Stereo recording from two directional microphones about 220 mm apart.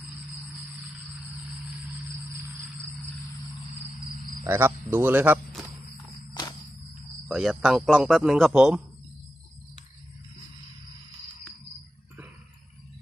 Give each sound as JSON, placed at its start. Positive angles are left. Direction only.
{"t": 4.4, "sound": "speech", "side_deg": -10}
{"t": 6.4, "sound": "cricket", "side_deg": 20}
{"t": 7.3, "sound": "speech", "side_deg": -5}